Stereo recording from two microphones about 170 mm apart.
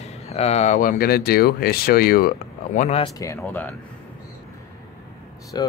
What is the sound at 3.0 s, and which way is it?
Speech, 20° left (ahead or behind).